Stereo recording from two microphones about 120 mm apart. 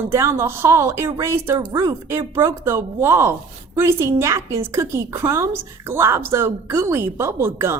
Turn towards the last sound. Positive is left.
turn(degrees=-20)  # may be behind; listen again after turning